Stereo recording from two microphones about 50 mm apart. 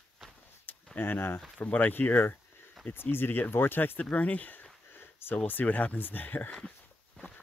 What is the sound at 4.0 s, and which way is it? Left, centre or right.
Speech, left.